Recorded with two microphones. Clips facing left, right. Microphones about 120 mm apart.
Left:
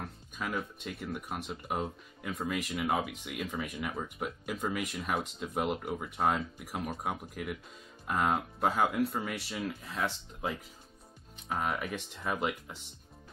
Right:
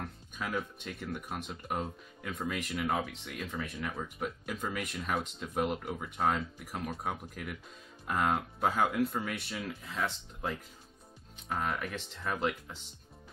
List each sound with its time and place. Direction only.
0.0 s speech: centre (ahead or behind)